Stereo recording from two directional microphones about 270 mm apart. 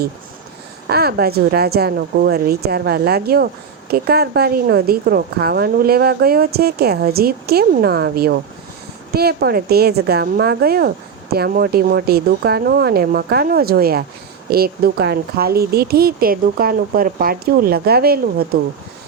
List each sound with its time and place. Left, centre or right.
0.9 s a woman's voice: right